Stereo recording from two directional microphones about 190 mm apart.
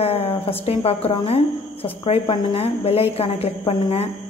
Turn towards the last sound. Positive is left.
turn(degrees=35)  # may be behind; listen again after turning